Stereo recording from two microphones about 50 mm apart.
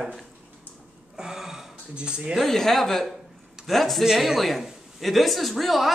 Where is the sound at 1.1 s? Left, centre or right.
Centre.